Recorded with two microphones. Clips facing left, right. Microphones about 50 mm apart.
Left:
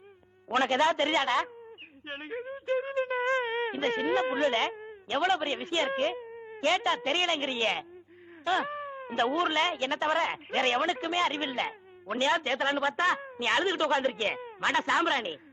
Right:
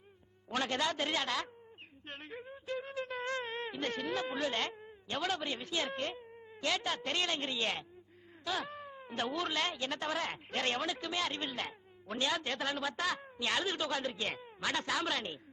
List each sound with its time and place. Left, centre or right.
0.4 s speech: left